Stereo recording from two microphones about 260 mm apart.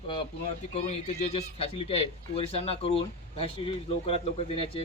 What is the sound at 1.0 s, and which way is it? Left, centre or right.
A man's voice, left.